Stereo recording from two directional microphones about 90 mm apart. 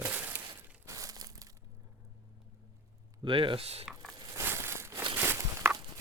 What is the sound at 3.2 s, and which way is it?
Speech, 70° right (ahead or behind).